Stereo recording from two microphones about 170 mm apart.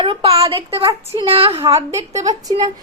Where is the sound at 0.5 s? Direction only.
35° right (ahead or behind).